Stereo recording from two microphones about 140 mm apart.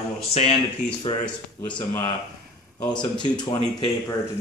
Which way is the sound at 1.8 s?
35° left (ahead or behind).